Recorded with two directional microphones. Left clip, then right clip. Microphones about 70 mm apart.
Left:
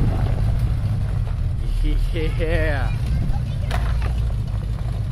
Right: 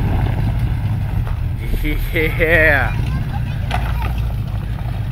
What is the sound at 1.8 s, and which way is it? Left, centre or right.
Speech, centre.